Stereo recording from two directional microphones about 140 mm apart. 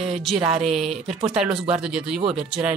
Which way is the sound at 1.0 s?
5° right (ahead or behind).